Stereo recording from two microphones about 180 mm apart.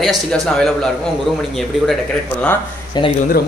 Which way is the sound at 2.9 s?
25° left (ahead or behind).